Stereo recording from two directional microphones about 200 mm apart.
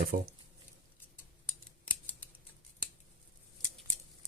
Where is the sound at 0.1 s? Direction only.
45° right (ahead or behind).